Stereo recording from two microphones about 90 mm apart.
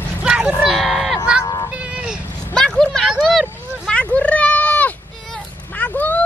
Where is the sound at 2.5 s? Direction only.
5° left (ahead or behind).